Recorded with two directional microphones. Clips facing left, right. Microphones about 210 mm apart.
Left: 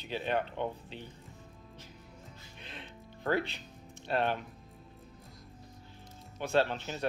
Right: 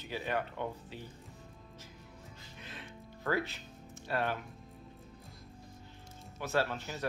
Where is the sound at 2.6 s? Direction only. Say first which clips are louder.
Even; 20° left (ahead or behind).